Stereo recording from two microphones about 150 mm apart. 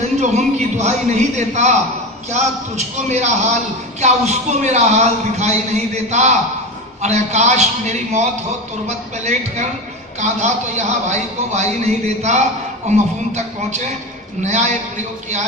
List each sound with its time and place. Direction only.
0.2 s a man's voice: 50° right (ahead or behind)